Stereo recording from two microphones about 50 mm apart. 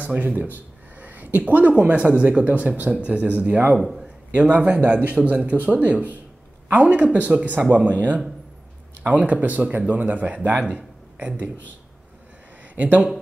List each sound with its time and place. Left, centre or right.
0.1 s a man's voice: right
12.7 s speech: right